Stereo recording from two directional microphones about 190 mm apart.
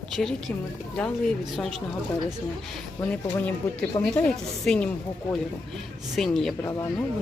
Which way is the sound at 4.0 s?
20° left (ahead or behind).